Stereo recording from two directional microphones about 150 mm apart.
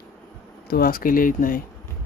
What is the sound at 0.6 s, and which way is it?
Speech, 80° left.